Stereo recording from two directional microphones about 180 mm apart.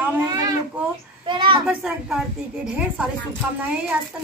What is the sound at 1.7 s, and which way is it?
A woman's voice, 5° right (ahead or behind).